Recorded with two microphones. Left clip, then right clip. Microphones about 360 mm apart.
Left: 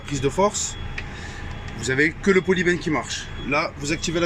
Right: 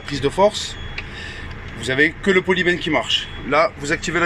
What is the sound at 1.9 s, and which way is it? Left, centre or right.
Speech, centre.